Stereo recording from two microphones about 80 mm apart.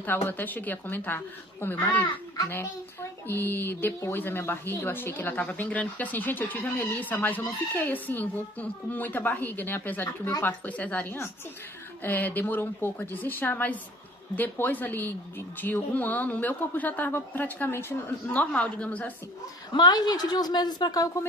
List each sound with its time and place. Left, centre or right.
0.0 s speech: left
18.4 s speech: centre
19.7 s speech: left